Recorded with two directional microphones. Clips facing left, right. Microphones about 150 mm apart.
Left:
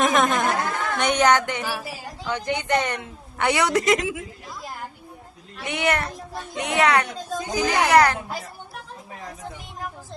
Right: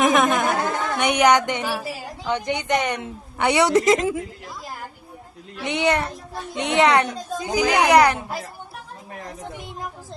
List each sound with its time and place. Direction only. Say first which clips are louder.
0.0 s a sound: right 2 dB; 5° right (ahead or behind)
0.4 s singing: right 2 dB; 20° right (ahead or behind)
1.8 s a woman's voice: right 3 dB; 20° right (ahead or behind)
5.6 s a woman's voice: right 3 dB; 20° right (ahead or behind)